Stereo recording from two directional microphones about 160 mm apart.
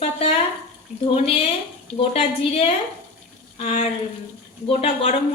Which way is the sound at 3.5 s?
40° left (ahead or behind).